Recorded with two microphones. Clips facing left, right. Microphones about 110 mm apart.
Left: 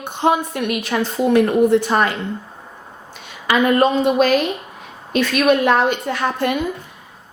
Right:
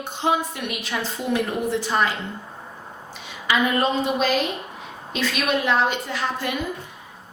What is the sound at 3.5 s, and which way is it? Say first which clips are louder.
A woman's voice: left 6 dB; 55° left (ahead or behind).